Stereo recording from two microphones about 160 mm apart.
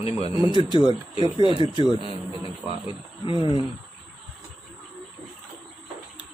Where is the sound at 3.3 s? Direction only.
30° right (ahead or behind).